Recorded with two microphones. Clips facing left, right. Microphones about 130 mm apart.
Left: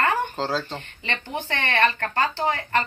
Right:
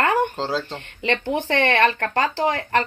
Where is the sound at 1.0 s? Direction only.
80° right.